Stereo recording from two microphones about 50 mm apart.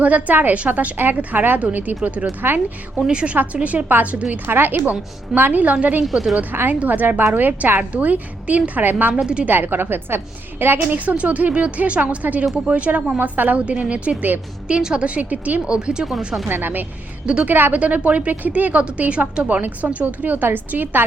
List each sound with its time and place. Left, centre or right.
0.0 s a woman's voice: right
0.9 s a woman's voice: right
3.1 s a woman's voice: centre
4.4 s a woman's voice: right
6.1 s a woman's voice: centre
6.5 s a woman's voice: right
9.1 s a woman's voice: right
9.5 s a woman's voice: right
11.2 s a woman's voice: right
13.1 s a woman's voice: right
13.7 s a woman's voice: right
15.0 s a woman's voice: right
15.6 s speech: centre
16.5 s a woman's voice: right